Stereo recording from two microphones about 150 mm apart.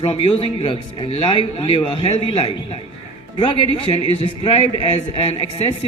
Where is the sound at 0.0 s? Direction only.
40° left (ahead or behind).